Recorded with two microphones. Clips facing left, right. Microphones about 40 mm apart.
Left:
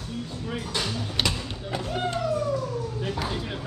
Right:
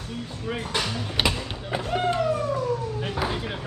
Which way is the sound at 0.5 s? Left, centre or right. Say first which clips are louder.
Right 3 dB; right.